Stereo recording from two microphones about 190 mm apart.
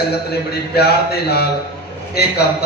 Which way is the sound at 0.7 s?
55° left (ahead or behind).